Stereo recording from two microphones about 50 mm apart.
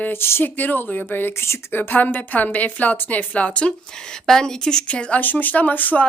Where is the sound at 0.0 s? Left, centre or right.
Left.